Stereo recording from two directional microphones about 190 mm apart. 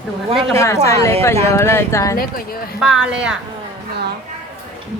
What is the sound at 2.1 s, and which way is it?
Speech, 50° left (ahead or behind).